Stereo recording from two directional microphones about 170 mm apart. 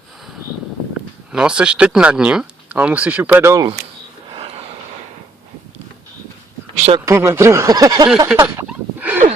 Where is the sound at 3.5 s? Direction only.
25° right (ahead or behind).